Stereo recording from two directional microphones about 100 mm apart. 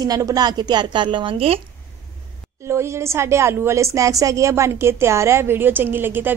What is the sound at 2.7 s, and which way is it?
A woman's voice, 25° right (ahead or behind).